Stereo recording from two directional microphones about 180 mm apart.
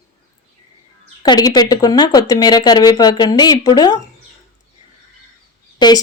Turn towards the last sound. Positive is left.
turn(degrees=25)  # may be behind; listen again after turning